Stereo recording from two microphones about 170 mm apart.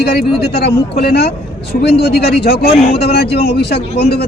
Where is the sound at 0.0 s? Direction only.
70° left (ahead or behind).